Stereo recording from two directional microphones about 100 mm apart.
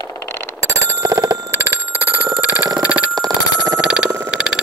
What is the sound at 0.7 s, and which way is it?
Telephone bell ringing, 30° right (ahead or behind).